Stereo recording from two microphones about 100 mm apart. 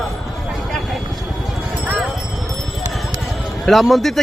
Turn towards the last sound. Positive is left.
turn(degrees=0)  # may be behind; listen again after turning